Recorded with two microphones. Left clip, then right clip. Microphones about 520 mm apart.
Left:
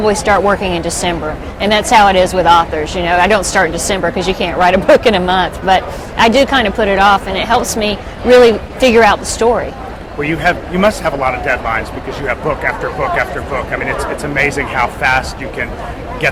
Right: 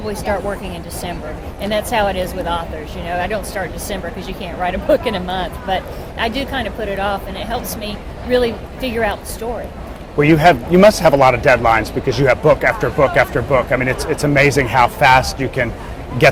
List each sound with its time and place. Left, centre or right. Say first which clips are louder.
0.0 s speech: left 10 dB; left
10.2 s a man's voice: right 3 dB; right